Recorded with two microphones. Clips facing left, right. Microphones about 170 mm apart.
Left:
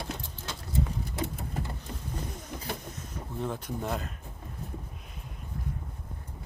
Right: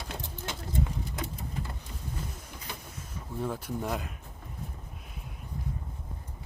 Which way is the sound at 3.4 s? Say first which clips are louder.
Right 1 dB; 5° right (ahead or behind).